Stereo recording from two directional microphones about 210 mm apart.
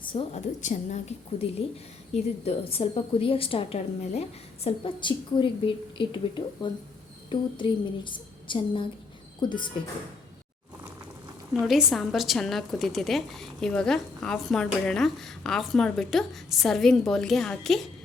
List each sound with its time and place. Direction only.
0.0 s a sound: 25° left (ahead or behind)
0.6 s a woman's voice: 35° left (ahead or behind)
2.4 s a woman's voice: 30° left (ahead or behind)
11.6 s a woman's voice: centre (ahead or behind)